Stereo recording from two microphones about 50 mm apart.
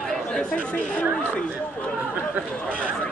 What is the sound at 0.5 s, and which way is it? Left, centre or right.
Speech, left.